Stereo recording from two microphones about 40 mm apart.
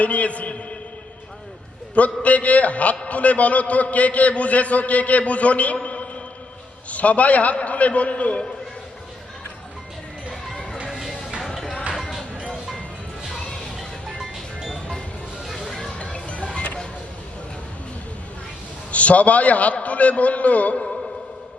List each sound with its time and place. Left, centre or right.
0.0 s a man's voice: left
2.0 s a man's voice: left
10.8 s music: centre
14.7 s music: centre
15.4 s music: centre
16.0 s music: left
18.9 s a man's voice: left